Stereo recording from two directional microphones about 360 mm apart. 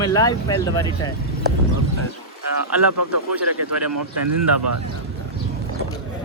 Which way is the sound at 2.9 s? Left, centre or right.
Right.